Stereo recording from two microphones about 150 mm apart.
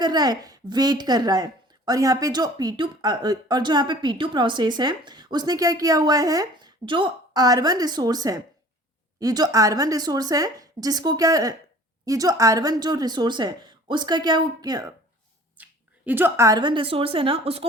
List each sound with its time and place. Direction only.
0.0 s a woman's voice: 25° right (ahead or behind)
15.5 s a sound: 10° right (ahead or behind)
16.6 s a woman's voice: 35° right (ahead or behind)